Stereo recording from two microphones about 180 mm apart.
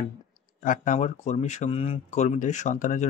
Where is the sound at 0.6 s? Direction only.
45° left (ahead or behind).